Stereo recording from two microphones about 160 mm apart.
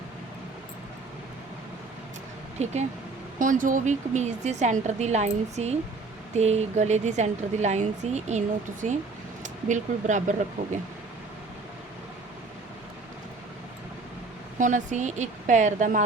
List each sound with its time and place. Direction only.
2.6 s a woman's voice: 45° right (ahead or behind)
3.3 s a woman's voice: 55° right (ahead or behind)
14.6 s a woman's voice: 50° right (ahead or behind)